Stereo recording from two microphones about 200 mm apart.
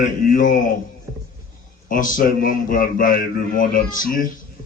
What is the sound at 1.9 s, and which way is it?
A man's voice, 40° left (ahead or behind).